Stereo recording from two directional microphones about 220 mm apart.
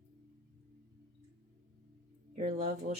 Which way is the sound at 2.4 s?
30° right (ahead or behind).